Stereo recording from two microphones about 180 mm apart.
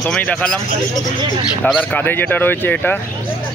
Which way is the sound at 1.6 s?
10° left (ahead or behind).